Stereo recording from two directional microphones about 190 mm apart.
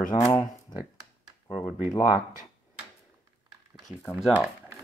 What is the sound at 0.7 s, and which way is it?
Speech, 25° left (ahead or behind).